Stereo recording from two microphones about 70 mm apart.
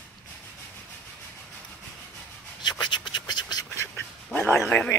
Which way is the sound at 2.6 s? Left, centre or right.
Left.